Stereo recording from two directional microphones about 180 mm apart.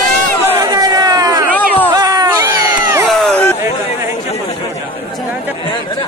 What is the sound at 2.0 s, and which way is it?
Cat, 20° right (ahead or behind).